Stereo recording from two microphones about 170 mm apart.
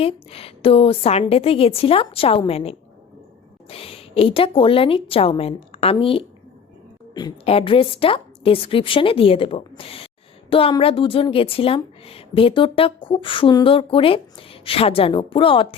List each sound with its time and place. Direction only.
0.0 s a woman's voice: 35° left (ahead or behind)